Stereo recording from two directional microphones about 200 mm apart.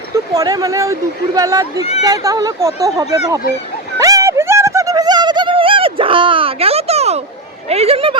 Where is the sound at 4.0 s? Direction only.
15° right (ahead or behind).